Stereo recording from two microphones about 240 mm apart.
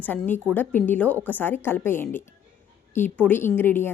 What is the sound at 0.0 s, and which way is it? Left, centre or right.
Speech, centre.